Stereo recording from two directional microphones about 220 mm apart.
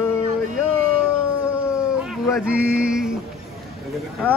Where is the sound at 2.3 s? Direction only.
5° right (ahead or behind).